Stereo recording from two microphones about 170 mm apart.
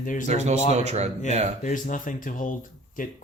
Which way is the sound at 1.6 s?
50° left (ahead or behind).